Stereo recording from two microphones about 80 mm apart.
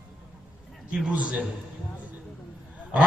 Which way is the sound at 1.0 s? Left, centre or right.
Centre.